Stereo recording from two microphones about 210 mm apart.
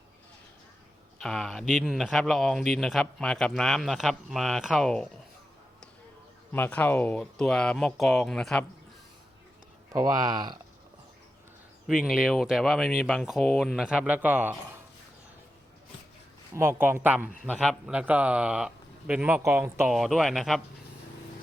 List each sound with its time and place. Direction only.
1.2 s speech: centre (ahead or behind)
6.5 s speech: 10° left (ahead or behind)
9.9 s speech: 15° right (ahead or behind)
11.9 s speech: centre (ahead or behind)
16.6 s speech: 10° right (ahead or behind)